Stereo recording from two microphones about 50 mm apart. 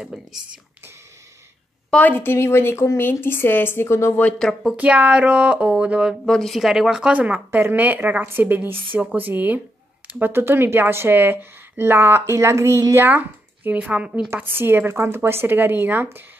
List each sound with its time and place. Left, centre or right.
0.0 s speech: centre
2.0 s a woman's voice: left
2.2 s speech: left
3.0 s a woman's voice: left
4.7 s speech: right
6.2 s a woman's voice: centre
6.6 s speech: centre
7.1 s a woman's voice: right
10.0 s a sound: right
10.3 s speech: right
13.7 s a woman's voice: right
14.3 s speech: right